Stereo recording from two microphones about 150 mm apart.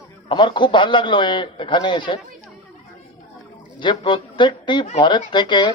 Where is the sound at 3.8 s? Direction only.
30° left (ahead or behind).